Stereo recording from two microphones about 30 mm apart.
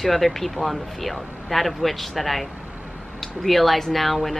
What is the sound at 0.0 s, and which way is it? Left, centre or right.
Speech, centre.